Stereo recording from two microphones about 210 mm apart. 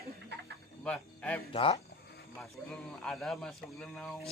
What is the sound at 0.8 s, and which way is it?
Speech, 5° left (ahead or behind).